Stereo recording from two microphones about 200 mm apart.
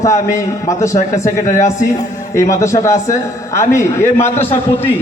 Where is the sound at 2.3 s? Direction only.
15° left (ahead or behind).